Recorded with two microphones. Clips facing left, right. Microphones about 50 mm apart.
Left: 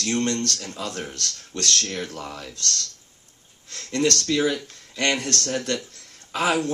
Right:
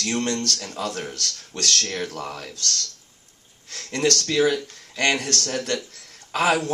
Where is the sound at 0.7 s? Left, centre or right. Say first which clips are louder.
Right 3 dB; right.